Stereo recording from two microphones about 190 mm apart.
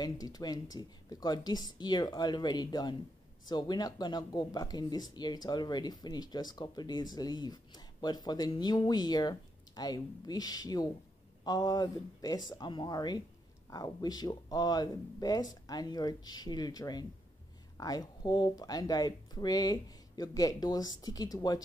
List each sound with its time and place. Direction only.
0.0 s speech: 20° left (ahead or behind)